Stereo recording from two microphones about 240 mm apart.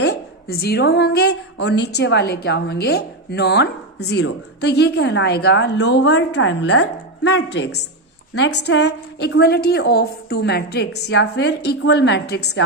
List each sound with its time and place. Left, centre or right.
0.0 s a woman's voice: left